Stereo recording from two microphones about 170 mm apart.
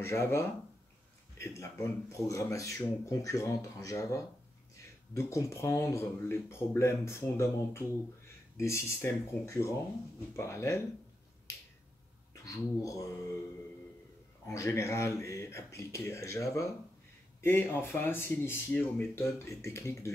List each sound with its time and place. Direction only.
0.0 s speech: 15° left (ahead or behind)
12.4 s speech: 20° left (ahead or behind)
14.4 s speech: 15° left (ahead or behind)